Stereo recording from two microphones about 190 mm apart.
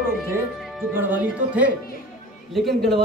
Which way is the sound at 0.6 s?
Centre (ahead or behind).